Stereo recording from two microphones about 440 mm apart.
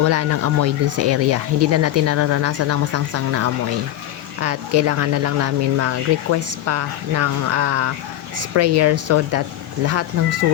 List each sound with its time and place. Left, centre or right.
0.0 s speech: right